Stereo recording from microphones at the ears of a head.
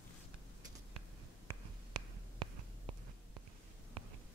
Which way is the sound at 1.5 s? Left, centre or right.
Right.